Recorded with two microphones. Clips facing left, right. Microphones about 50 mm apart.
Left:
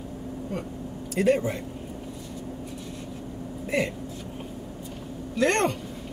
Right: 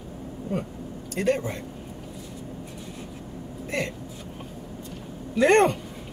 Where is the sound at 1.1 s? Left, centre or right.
Centre.